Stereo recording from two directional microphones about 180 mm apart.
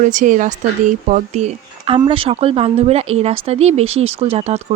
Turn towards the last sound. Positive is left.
turn(degrees=-35)  # may be behind; listen again after turning